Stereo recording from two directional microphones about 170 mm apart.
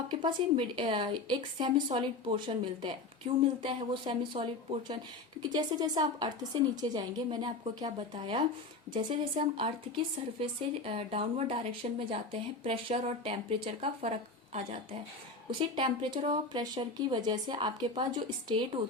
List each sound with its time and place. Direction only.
0.1 s a woman's voice: 30° right (ahead or behind)
15.4 s a woman's voice: 30° right (ahead or behind)